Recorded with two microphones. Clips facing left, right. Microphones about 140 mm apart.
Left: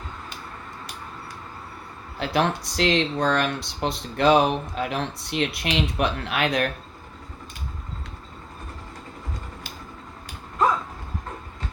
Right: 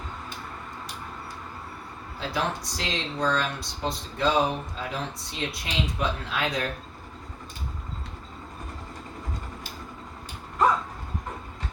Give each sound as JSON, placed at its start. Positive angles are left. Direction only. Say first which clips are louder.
{"t": 2.1, "sound": "speech", "louder": "left 6 dB", "side_deg": 70}